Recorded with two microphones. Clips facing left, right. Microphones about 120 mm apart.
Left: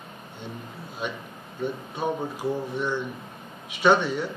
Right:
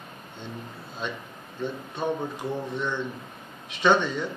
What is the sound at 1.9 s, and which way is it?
A man's voice, 10° left (ahead or behind).